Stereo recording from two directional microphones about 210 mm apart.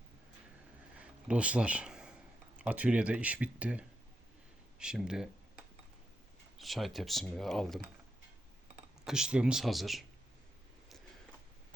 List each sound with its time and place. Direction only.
1.3 s speech: 5° right (ahead or behind)
6.6 s speech: centre (ahead or behind)
9.0 s speech: 5° right (ahead or behind)